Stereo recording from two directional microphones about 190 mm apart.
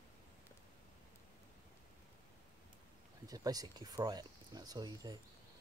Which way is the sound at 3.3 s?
20° right (ahead or behind).